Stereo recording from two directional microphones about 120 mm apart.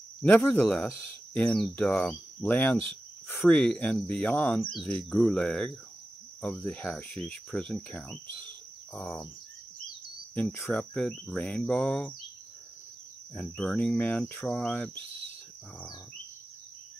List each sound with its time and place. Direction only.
0.2 s cricket: 15° left (ahead or behind)
1.6 s speech: 10° left (ahead or behind)
3.3 s cricket: 10° left (ahead or behind)
8.9 s speech: 5° left (ahead or behind)
10.3 s speech: 20° left (ahead or behind)
10.7 s cricket: 5° left (ahead or behind)
13.3 s cricket: 5° left (ahead or behind)